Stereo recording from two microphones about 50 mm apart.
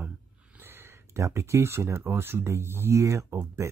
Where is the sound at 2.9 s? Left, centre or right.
Right.